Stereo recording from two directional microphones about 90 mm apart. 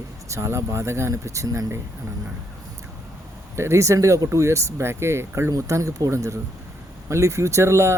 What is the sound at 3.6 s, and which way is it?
Speech, 35° right (ahead or behind).